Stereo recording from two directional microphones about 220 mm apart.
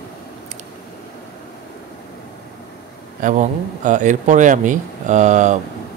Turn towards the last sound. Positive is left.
turn(degrees=-35)  # may be behind; listen again after turning